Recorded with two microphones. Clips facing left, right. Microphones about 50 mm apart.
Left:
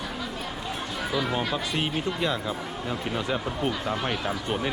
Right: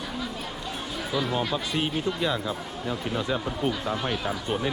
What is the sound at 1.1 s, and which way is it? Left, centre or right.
Speech, centre.